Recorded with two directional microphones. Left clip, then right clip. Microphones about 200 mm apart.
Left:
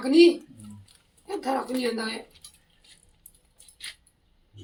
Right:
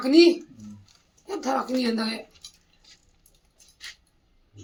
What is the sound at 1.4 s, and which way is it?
Speech, 45° right (ahead or behind).